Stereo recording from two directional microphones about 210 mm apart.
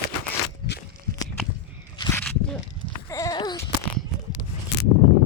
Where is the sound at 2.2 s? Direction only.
5° left (ahead or behind).